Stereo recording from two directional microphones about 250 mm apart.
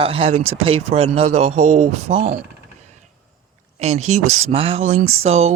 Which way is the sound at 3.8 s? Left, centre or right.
Right.